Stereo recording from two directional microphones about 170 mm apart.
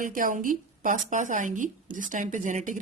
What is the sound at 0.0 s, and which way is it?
Speech, 50° right (ahead or behind).